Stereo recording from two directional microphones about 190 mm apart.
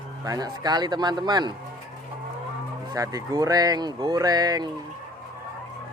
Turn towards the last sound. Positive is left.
turn(degrees=-20)  # may be behind; listen again after turning